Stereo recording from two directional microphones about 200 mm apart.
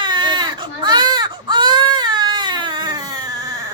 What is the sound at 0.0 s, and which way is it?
Baby cry, 20° right (ahead or behind).